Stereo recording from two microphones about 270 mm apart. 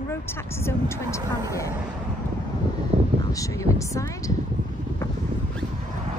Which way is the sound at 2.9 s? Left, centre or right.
Right.